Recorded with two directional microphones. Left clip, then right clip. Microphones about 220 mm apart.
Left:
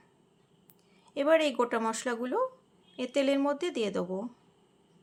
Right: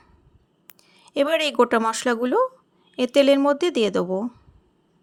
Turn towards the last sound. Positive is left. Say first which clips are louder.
# right 10 dB
turn(degrees=-35)  # may be behind; listen again after turning